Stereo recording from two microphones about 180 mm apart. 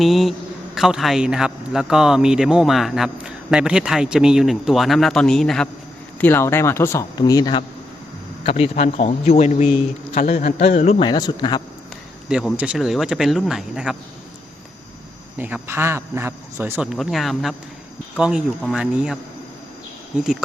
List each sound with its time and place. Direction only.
0.0 s speech: centre (ahead or behind); by 7.6 s 20° left (ahead or behind)
8.5 s a man's voice: 35° left (ahead or behind)
11.0 s speech: 25° left (ahead or behind)
12.3 s speech: 5° right (ahead or behind)
15.4 s a man's voice: 10° right (ahead or behind)